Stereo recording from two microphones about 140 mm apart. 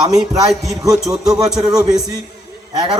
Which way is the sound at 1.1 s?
25° right (ahead or behind).